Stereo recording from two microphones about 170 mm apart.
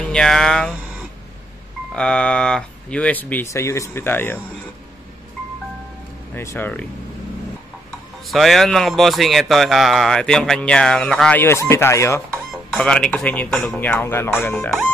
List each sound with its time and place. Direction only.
0.0 s speech: 5° left (ahead or behind)
2.0 s speech: 5° left (ahead or behind)
6.3 s speech: 15° left (ahead or behind)
8.3 s a man's voice: centre (ahead or behind); by 12.2 s 15° left (ahead or behind)
12.7 s a man's voice: 5° left (ahead or behind)
14.5 s a man's voice: centre (ahead or behind)